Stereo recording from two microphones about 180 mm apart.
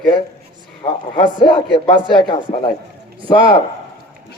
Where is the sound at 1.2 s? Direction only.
25° left (ahead or behind).